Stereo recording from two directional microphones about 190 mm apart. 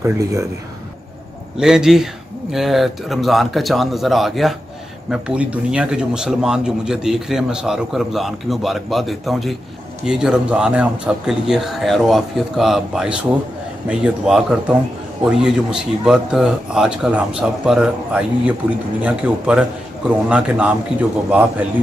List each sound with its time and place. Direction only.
0.0 s a man's voice: 15° right (ahead or behind)
1.6 s a man's voice: 5° right (ahead or behind)